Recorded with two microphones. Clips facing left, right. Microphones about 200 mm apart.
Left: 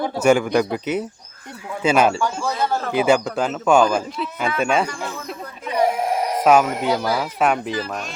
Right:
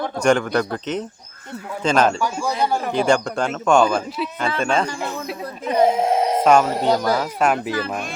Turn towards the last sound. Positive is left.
turn(degrees=0)  # may be behind; listen again after turning